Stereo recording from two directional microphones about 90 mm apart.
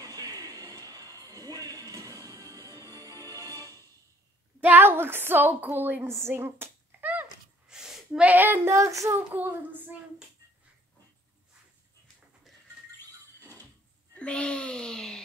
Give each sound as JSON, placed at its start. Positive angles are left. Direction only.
{"t": 0.0, "sound": "music", "side_deg": -40}
{"t": 4.6, "sound": "a woman's voice", "side_deg": -20}
{"t": 7.6, "sound": "a sound", "side_deg": -5}
{"t": 8.3, "sound": "child singing", "side_deg": -20}
{"t": 8.7, "sound": "a child's voice", "side_deg": -35}
{"t": 9.3, "sound": "child singing", "side_deg": -20}
{"t": 14.1, "sound": "a sound", "side_deg": 10}